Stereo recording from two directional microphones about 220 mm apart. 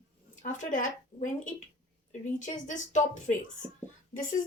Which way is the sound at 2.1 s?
35° left (ahead or behind).